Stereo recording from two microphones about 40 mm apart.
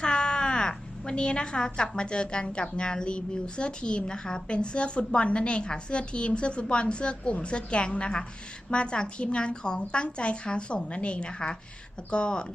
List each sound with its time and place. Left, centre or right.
0.0 s crow: left
2.0 s speech: left